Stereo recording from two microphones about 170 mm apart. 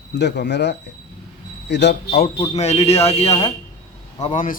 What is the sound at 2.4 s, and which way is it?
Speech, 40° left (ahead or behind).